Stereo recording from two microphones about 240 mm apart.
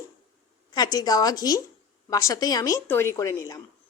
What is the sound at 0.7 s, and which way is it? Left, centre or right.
A woman's voice, centre.